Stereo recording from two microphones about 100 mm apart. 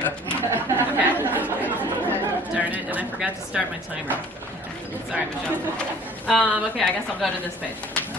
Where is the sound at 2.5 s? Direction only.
15° right (ahead or behind).